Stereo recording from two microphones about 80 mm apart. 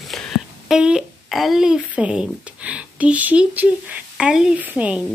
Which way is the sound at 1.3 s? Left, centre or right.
Centre.